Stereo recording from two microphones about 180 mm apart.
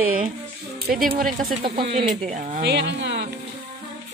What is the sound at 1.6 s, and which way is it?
Speech, 30° right (ahead or behind).